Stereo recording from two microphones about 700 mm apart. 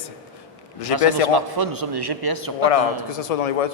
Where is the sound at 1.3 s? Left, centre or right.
Right.